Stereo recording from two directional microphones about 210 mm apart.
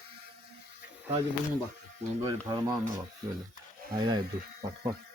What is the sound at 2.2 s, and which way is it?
Speech, 20° right (ahead or behind).